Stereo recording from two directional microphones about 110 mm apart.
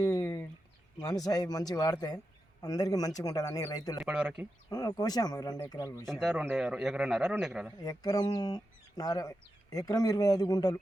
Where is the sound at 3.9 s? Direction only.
5° right (ahead or behind).